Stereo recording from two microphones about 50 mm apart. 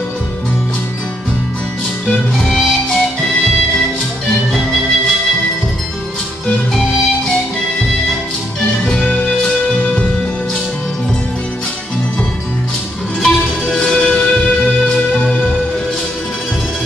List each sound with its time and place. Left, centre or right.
2.3 s music: centre
6.7 s music: centre
8.5 s music: left
13.2 s music: centre